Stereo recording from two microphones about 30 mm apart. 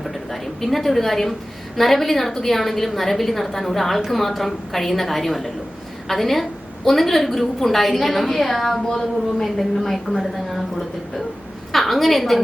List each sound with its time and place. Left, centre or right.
0.0 s a sound: centre
1.7 s a woman's voice: centre
8.9 s a woman's voice: centre
11.7 s a woman's voice: centre